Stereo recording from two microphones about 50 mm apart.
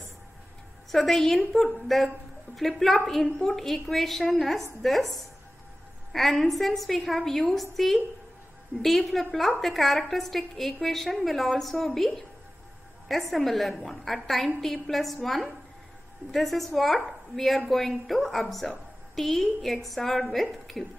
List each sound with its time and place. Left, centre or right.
0.9 s a woman's voice: centre